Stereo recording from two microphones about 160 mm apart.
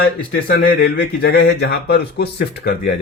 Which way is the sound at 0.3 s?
75° left (ahead or behind).